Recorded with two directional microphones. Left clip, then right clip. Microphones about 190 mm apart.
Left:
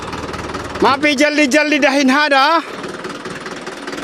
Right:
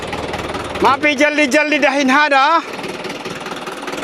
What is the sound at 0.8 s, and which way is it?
A man's voice, 35° left (ahead or behind).